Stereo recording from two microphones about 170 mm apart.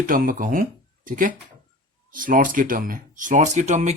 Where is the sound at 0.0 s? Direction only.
55° right (ahead or behind).